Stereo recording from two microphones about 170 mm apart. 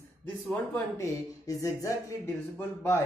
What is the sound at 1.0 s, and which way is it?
A man's voice, 20° left (ahead or behind).